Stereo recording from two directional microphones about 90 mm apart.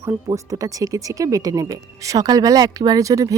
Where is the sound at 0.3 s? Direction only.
45° right (ahead or behind).